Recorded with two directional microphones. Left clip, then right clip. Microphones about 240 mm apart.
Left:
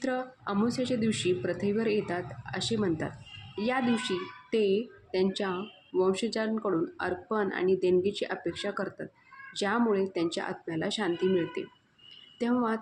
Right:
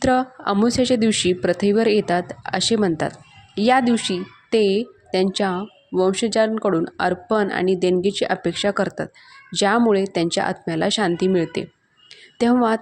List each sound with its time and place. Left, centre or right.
0.0 s speech: right